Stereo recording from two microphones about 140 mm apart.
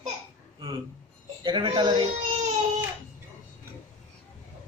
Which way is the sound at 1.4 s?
35° right (ahead or behind).